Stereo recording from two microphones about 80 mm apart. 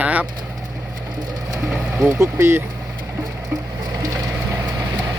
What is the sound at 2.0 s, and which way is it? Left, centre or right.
Speech, right.